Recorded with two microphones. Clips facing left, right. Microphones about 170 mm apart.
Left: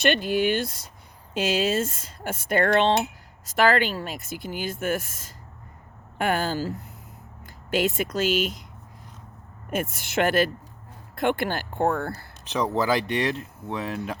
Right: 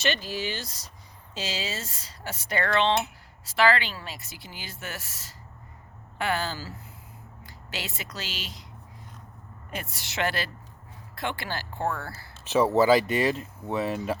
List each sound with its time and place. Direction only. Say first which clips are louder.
0.0 s speech: left 7 dB; 55° left (ahead or behind)
7.4 s a sound: left 13 dB; 50° left (ahead or behind)
7.9 s speech: left 15 dB; 50° left (ahead or behind)
9.9 s speech: left 6 dB; 50° left (ahead or behind)
12.5 s speech: right 4 dB; 5° right (ahead or behind)